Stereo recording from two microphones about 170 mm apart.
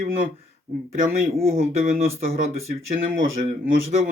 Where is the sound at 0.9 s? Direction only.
55° right (ahead or behind).